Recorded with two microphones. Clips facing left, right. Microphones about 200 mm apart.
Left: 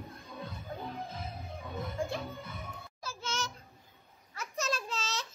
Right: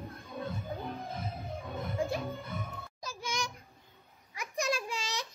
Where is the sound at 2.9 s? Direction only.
15° right (ahead or behind).